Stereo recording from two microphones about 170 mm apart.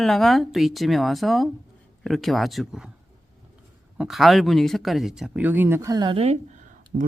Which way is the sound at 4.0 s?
Centre (ahead or behind).